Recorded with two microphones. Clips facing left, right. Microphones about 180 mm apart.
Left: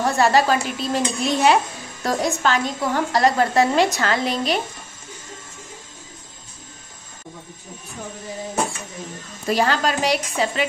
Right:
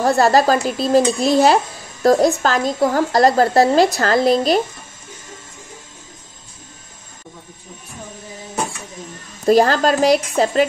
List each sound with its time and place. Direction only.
0.0 s speech: 35° right (ahead or behind)
9.5 s speech: 40° right (ahead or behind)